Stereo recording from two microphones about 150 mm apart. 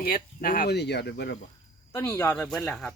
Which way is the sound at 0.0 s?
75° left (ahead or behind).